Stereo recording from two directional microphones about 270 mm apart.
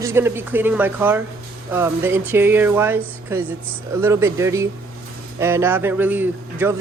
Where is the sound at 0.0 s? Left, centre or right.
Centre.